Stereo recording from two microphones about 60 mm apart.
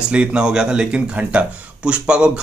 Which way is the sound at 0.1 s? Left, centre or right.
Centre.